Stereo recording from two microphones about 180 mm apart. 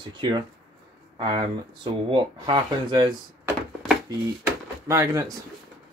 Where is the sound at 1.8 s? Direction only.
25° right (ahead or behind).